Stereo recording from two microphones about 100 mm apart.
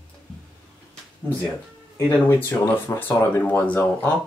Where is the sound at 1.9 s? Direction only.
25° left (ahead or behind).